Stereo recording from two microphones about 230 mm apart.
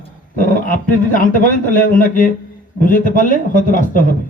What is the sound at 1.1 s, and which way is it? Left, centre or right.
A man's voice, left.